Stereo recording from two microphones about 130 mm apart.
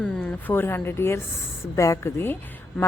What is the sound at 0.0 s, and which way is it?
A woman's voice, 10° left (ahead or behind).